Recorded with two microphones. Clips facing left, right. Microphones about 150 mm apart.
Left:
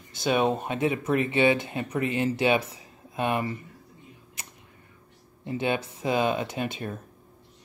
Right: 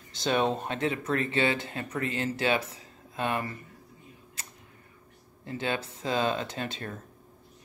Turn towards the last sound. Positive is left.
turn(degrees=15)  # may be behind; listen again after turning